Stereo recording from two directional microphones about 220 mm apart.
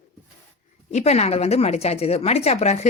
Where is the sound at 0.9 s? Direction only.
30° left (ahead or behind).